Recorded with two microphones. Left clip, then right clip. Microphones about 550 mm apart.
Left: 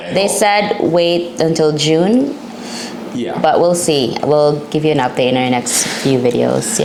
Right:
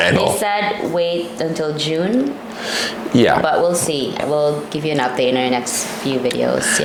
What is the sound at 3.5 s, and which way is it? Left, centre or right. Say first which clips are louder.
Speech: left 4 dB; left.